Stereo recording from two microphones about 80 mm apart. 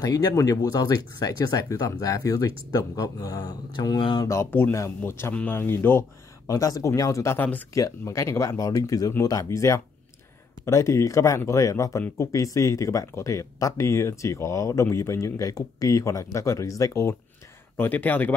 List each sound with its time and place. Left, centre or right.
0.0 s speech: left
0.3 s speech: left
4.2 s speech: left
4.5 s speech: left
6.4 s speech: left
7.3 s speech: left
7.7 s speech: left
17.7 s speech: left